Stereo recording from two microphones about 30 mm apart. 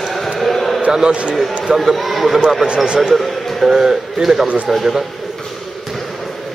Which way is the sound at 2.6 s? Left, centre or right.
Right.